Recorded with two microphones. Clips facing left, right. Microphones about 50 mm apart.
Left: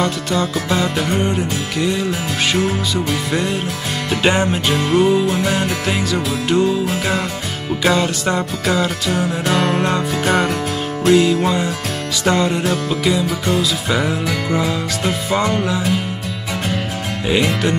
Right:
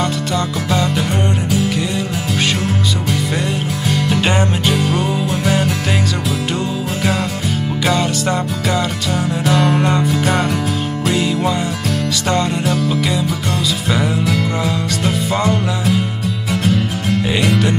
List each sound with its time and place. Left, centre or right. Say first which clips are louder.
0.0 s music: even; centre
4.1 s music: left 3 dB; centre
4.7 s music: left 3 dB; centre
5.1 s music: left 1 dB; centre
7.8 s music: left 1 dB; centre
17.3 s music: left 2 dB; centre